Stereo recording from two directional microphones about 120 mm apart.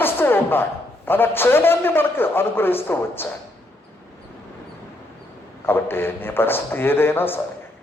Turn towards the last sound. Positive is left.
turn(degrees=15)  # may be behind; listen again after turning